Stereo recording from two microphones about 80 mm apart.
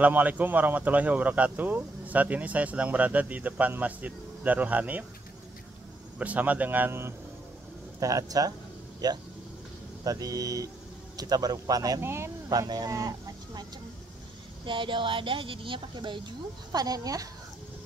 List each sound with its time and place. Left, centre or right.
0.0 s speech: centre
6.1 s speech: centre
8.0 s speech: right
10.0 s speech: right
12.0 s speech: right
12.4 s speech: right
14.6 s speech: right
16.7 s speech: right